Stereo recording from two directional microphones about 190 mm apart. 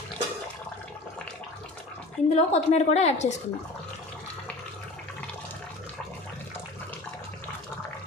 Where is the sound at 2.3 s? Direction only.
35° left (ahead or behind).